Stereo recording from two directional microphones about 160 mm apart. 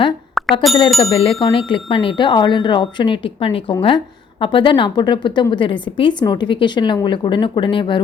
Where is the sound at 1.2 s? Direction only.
35° left (ahead or behind).